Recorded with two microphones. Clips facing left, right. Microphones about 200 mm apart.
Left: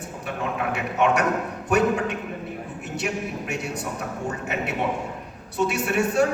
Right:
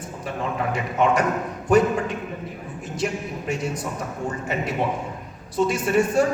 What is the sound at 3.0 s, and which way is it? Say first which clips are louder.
Speech: right 3 dB; 70° left (ahead or behind).